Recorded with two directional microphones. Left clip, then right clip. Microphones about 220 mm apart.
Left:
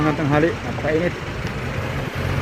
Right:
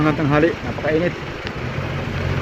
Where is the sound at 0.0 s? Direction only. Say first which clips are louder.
Right 2 dB; 5° right (ahead or behind).